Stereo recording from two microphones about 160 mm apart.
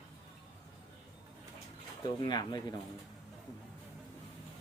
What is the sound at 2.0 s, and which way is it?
Speech, 25° left (ahead or behind).